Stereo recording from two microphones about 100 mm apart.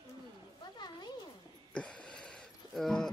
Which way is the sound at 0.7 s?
45° left (ahead or behind).